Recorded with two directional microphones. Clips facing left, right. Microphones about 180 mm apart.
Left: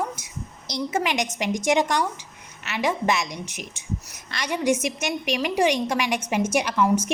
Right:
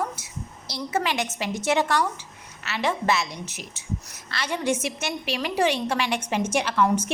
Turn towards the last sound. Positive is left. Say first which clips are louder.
# left 1 dB
turn(degrees=10)  # may be behind; listen again after turning